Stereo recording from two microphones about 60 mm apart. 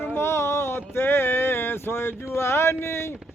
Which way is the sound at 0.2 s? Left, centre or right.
Left.